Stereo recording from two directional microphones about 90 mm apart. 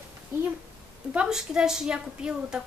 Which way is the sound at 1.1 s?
5° right (ahead or behind).